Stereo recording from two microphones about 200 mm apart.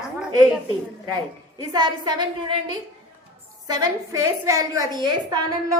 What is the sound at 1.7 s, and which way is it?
Speech, 20° right (ahead or behind).